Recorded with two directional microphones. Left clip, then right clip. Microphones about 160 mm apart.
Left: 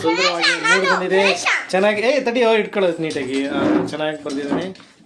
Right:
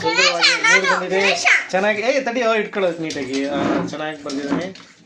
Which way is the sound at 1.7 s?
25° left (ahead or behind).